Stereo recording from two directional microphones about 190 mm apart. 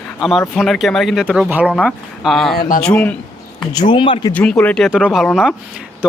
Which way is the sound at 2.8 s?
5° left (ahead or behind).